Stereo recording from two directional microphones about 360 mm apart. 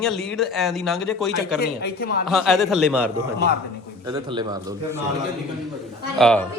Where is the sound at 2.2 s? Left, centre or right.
Centre.